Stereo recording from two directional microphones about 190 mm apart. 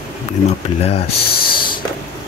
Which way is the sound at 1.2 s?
50° left (ahead or behind).